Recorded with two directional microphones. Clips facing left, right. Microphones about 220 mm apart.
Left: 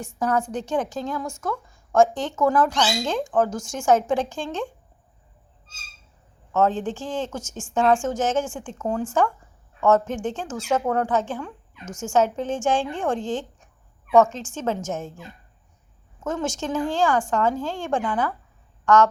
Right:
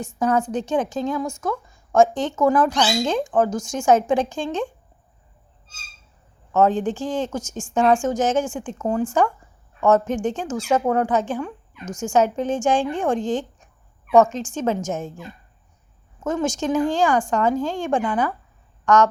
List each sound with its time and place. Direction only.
0.2 s a woman's voice: 20° right (ahead or behind)
6.5 s a woman's voice: 15° right (ahead or behind)